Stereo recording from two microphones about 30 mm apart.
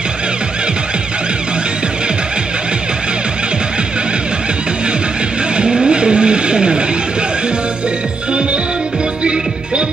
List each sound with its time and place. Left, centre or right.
5.6 s vehicle: right
9.2 s music: right